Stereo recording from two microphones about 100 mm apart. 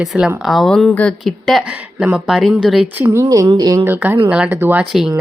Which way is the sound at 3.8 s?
20° right (ahead or behind).